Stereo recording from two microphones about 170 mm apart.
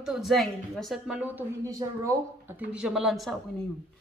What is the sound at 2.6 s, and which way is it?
Speech, 5° right (ahead or behind).